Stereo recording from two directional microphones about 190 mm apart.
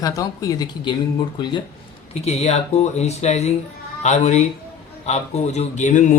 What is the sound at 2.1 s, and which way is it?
A man's voice, 35° left (ahead or behind).